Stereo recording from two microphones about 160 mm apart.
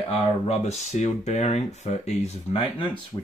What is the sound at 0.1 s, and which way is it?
Speech, 45° left (ahead or behind).